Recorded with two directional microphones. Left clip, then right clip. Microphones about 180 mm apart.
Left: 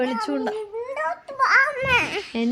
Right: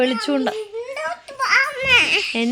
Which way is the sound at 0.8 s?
5° left (ahead or behind).